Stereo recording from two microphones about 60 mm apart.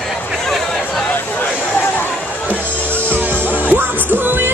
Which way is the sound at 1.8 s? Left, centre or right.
Left.